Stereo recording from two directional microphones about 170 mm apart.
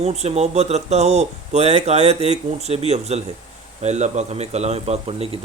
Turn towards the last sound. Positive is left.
turn(degrees=-35)  # may be behind; listen again after turning